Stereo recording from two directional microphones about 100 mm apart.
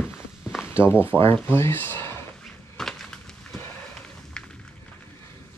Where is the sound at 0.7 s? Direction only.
25° left (ahead or behind).